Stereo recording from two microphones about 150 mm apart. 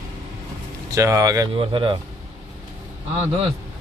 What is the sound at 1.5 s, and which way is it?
Speech, 35° right (ahead or behind).